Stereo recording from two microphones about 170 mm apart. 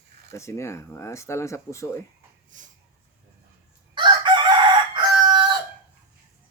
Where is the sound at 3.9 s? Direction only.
25° right (ahead or behind).